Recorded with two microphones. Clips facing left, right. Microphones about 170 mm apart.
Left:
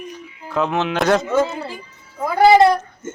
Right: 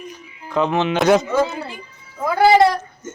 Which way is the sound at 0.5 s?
Centre (ahead or behind).